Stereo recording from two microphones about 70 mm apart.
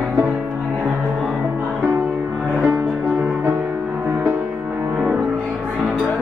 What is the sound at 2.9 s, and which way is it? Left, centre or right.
Music, right.